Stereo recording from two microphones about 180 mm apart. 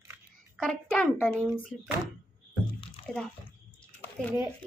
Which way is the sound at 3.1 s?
Centre (ahead or behind).